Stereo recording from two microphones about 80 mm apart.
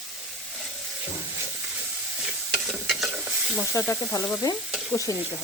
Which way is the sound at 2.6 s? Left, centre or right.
Centre.